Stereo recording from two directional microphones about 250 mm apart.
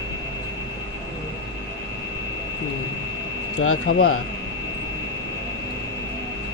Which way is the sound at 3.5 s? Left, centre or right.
Left.